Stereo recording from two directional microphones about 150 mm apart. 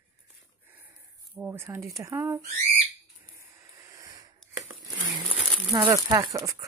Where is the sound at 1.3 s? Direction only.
15° right (ahead or behind).